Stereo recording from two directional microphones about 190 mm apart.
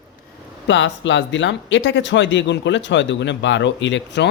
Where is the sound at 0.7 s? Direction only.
70° left (ahead or behind).